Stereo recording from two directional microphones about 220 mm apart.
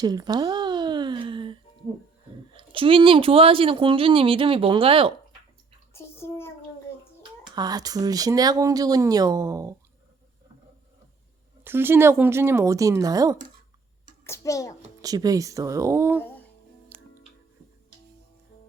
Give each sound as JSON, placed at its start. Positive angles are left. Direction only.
{"t": 0.0, "sound": "a sound", "side_deg": -20}
{"t": 2.5, "sound": "speech", "side_deg": -25}
{"t": 5.9, "sound": "bathtub", "side_deg": 10}
{"t": 7.5, "sound": "speech", "side_deg": -20}
{"t": 11.6, "sound": "speech", "side_deg": -10}
{"t": 14.3, "sound": "a child's voice", "side_deg": 15}
{"t": 15.0, "sound": "speech", "side_deg": -15}
{"t": 16.9, "sound": "music", "side_deg": -10}